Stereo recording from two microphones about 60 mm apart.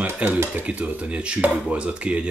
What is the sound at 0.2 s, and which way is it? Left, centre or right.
Speech, right.